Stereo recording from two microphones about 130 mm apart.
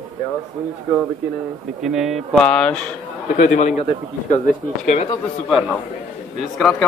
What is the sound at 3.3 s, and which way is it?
Speech, 70° left (ahead or behind).